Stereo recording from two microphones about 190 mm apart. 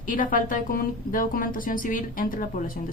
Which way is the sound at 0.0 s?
45° left (ahead or behind).